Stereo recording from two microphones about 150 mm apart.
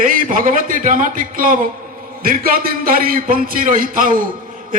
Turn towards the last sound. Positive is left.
turn(degrees=-65)  # may be behind; listen again after turning